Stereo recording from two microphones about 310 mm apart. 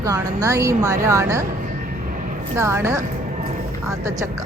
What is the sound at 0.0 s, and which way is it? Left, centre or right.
Speech, centre.